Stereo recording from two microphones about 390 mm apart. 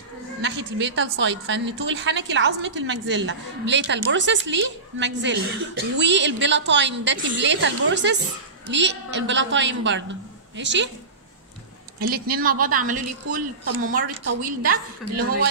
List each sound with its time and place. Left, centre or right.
0.4 s a woman's voice: right
12.0 s a woman's voice: right